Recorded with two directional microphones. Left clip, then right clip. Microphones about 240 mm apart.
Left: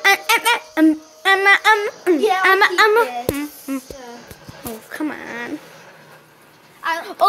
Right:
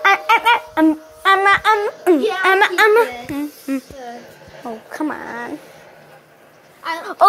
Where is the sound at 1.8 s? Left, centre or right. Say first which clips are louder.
Right 2 dB; centre.